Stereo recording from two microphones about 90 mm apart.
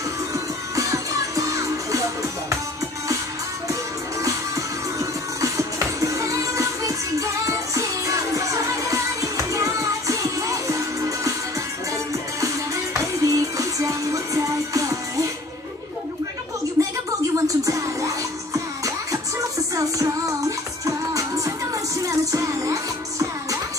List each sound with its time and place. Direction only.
0.3 s music: 40° right (ahead or behind)
4.9 s music: 35° right (ahead or behind)
12.4 s music: 35° right (ahead or behind)
16.8 s a sound: 30° right (ahead or behind)
17.5 s music: 40° right (ahead or behind)